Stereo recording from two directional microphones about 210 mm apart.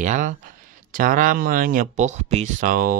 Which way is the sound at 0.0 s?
35° right (ahead or behind).